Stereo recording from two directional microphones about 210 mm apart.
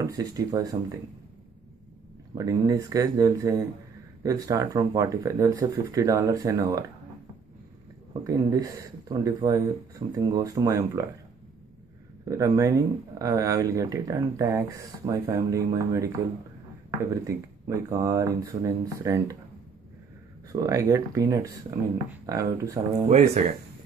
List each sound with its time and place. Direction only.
0.0 s speech: 15° right (ahead or behind)
2.3 s speech: 15° right (ahead or behind)
8.1 s speech: 15° right (ahead or behind)
12.3 s speech: 15° right (ahead or behind)
17.1 s speech: 15° right (ahead or behind)
20.5 s speech: 15° right (ahead or behind)
23.0 s speech: 30° right (ahead or behind)